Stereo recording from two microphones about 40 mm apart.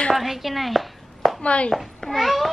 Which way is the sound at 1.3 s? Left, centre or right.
Left.